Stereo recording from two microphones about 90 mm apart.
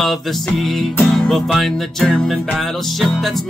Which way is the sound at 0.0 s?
Centre (ahead or behind).